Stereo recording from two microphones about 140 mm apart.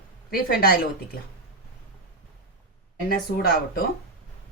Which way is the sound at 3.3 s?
90° left.